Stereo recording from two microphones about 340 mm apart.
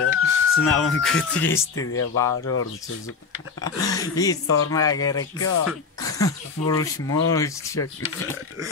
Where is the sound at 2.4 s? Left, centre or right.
Left.